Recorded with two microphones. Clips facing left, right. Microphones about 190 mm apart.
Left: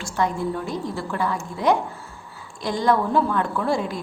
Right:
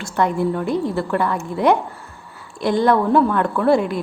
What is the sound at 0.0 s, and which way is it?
A woman's voice, 60° right (ahead or behind).